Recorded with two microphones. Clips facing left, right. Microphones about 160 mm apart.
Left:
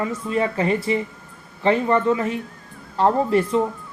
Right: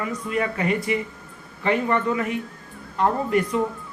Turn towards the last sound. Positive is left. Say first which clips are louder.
# left 3 dB
turn(degrees=30)  # may be behind; listen again after turning